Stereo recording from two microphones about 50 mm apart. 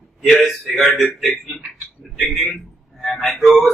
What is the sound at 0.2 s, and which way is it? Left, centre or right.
Speech, centre.